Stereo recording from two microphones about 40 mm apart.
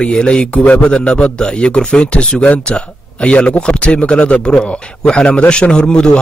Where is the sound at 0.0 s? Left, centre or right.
Left.